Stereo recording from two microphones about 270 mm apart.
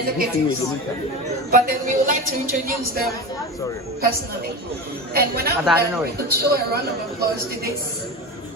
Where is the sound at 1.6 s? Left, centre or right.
Right.